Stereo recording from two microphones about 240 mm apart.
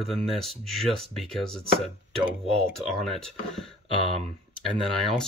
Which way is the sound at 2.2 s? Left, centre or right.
Right.